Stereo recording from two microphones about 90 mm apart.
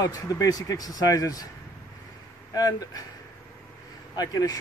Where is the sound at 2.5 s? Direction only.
45° left (ahead or behind).